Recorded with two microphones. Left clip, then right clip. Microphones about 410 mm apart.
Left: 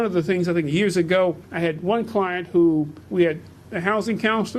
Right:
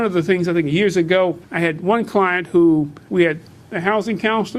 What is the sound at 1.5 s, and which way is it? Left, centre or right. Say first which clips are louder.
A man's voice: right 4 dB; right.